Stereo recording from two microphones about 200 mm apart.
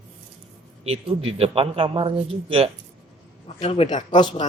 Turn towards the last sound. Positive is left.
turn(degrees=25)  # may be behind; listen again after turning